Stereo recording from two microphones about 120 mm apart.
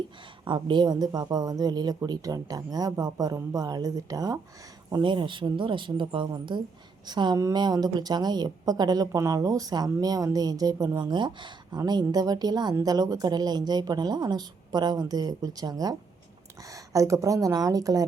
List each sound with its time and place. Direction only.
0.4 s a woman's voice: 40° right (ahead or behind)